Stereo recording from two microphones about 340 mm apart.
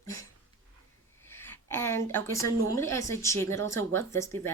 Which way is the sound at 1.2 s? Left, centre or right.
Centre.